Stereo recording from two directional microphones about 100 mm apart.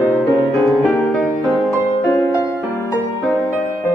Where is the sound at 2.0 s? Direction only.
25° left (ahead or behind).